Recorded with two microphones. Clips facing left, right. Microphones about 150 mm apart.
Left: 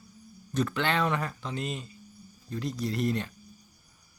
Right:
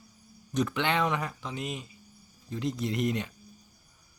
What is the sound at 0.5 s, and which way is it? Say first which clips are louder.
Speech: even; 15° right (ahead or behind).